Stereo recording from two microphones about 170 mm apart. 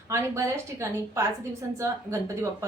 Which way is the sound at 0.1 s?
15° right (ahead or behind).